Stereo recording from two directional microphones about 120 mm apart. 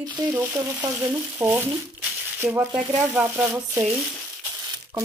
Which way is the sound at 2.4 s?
10° right (ahead or behind).